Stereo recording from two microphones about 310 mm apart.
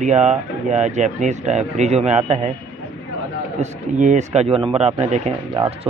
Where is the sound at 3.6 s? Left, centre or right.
Right.